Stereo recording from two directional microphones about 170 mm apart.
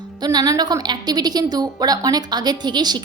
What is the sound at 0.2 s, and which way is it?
A woman's voice, 20° right (ahead or behind).